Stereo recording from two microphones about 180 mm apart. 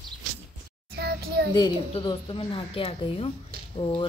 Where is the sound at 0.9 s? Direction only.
65° right (ahead or behind).